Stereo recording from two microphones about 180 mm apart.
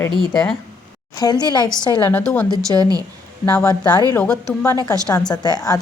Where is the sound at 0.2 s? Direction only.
Centre (ahead or behind).